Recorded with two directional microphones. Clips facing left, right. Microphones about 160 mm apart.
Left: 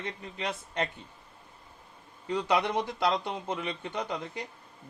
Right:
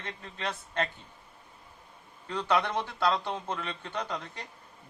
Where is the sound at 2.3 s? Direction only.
15° left (ahead or behind).